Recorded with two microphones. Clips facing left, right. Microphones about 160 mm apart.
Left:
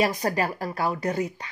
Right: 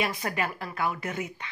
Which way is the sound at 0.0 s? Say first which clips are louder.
Left 6 dB; 40° left (ahead or behind).